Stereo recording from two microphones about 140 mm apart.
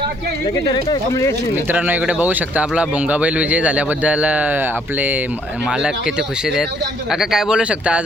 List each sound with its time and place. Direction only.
1.1 s speech: 20° left (ahead or behind)
1.6 s speech: 10° right (ahead or behind)